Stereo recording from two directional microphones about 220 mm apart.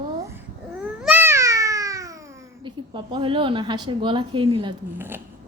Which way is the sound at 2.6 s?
20° right (ahead or behind).